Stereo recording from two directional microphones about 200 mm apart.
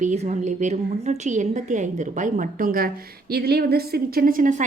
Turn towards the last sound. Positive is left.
turn(degrees=-40)  # may be behind; listen again after turning